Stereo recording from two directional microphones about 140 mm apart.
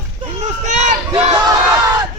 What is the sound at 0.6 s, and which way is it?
Speech, 60° right (ahead or behind).